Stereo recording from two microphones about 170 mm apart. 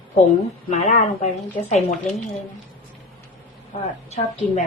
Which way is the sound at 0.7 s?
45° left (ahead or behind).